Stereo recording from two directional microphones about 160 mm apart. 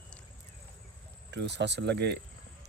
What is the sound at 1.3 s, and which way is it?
Speech, 90° right.